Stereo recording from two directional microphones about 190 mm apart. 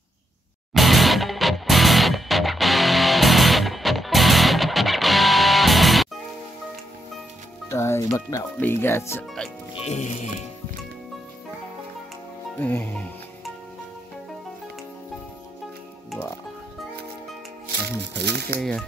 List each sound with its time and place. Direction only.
0.7 s music: centre (ahead or behind)
7.7 s speech: 15° left (ahead or behind)
9.8 s speech: 40° left (ahead or behind)
12.5 s speech: 10° left (ahead or behind)
17.8 s speech: 60° right (ahead or behind)
18.6 s speech: 5° left (ahead or behind)